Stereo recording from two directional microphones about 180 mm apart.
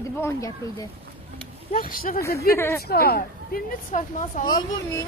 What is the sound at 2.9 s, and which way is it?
Speech, 60° left (ahead or behind).